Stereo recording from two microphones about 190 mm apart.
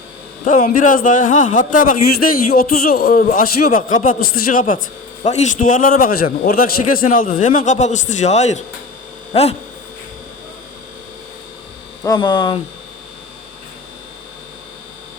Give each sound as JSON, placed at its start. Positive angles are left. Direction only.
{"t": 0.4, "sound": "a man's voice", "side_deg": 45}
{"t": 5.2, "sound": "a man's voice", "side_deg": 40}
{"t": 12.0, "sound": "hum", "side_deg": 20}